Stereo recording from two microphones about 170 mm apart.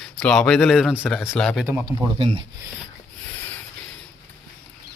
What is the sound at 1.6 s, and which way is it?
Speech, 15° right (ahead or behind).